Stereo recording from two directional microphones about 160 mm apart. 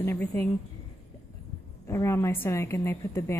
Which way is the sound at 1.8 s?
15° left (ahead or behind).